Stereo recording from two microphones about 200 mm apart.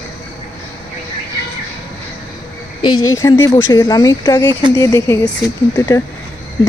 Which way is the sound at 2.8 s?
20° left (ahead or behind).